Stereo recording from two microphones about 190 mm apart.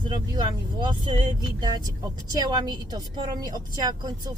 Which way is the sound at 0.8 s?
25° right (ahead or behind).